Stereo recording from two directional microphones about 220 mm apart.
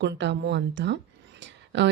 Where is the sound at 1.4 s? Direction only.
55° right (ahead or behind).